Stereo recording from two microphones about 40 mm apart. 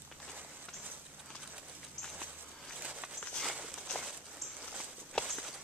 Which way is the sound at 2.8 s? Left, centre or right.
Right.